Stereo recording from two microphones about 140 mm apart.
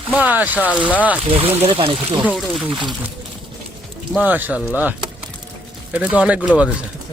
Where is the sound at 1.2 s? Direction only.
40° right (ahead or behind).